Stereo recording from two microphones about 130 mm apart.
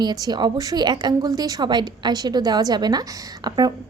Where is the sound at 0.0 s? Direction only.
30° right (ahead or behind).